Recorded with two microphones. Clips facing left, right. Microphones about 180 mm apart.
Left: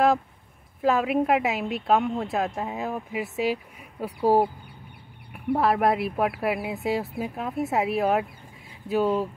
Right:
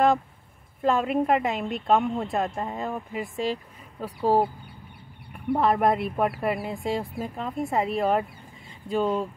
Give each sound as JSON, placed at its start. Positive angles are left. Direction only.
{"t": 0.8, "sound": "speech", "side_deg": 5}